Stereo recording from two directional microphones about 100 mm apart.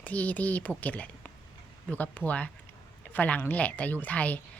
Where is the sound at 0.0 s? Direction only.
15° left (ahead or behind).